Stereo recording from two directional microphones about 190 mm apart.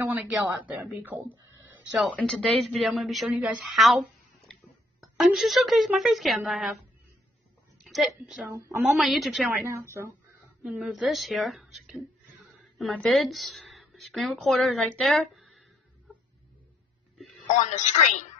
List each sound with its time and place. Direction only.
0.0 s speech: 10° right (ahead or behind)
2.0 s a woman's voice: centre (ahead or behind)
7.8 s a woman's voice: centre (ahead or behind)
8.5 s a woman's voice: 15° right (ahead or behind)
8.9 s a woman's voice: centre (ahead or behind)
9.7 s a woman's voice: 15° right (ahead or behind)
10.6 s a woman's voice: centre (ahead or behind)
17.6 s a woman's voice: 40° left (ahead or behind)